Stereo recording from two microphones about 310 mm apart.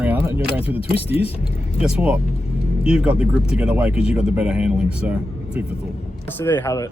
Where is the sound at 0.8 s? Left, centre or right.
Centre.